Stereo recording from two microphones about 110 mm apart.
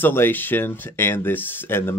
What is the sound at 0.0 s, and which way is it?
Speech, 20° left (ahead or behind).